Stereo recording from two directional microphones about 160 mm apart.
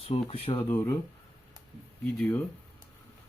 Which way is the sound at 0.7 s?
15° left (ahead or behind).